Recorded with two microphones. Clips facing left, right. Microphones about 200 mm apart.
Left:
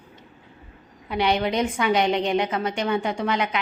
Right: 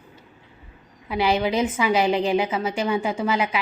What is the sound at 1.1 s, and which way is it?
A woman's voice, 5° right (ahead or behind).